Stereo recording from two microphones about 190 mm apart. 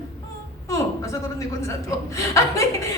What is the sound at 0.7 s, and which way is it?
A woman's voice, 15° left (ahead or behind).